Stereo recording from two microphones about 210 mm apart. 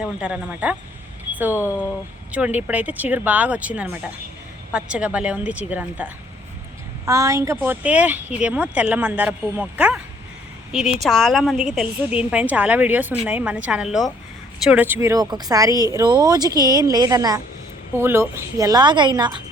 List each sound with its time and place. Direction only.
0.0 s a woman's voice: 5° right (ahead or behind); by 19.3 s 20° right (ahead or behind)